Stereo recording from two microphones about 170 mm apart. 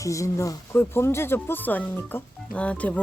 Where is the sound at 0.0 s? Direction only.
20° left (ahead or behind).